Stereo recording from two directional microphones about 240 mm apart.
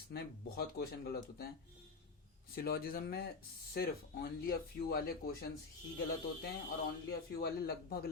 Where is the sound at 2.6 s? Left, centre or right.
Left.